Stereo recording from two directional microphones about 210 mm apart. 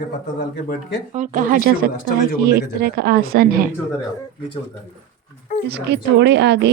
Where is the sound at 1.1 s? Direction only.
40° right (ahead or behind).